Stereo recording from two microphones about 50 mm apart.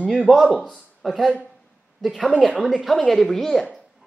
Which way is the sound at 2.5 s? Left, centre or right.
Centre.